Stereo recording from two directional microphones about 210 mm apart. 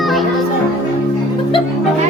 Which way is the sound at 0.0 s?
Centre (ahead or behind).